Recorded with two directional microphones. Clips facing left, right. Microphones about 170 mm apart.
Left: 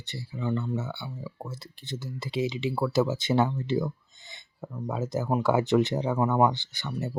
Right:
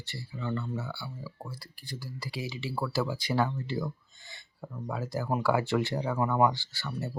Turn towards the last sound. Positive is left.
turn(degrees=20)  # may be behind; listen again after turning